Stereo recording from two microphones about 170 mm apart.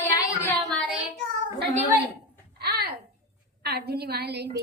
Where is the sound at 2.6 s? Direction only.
70° right (ahead or behind).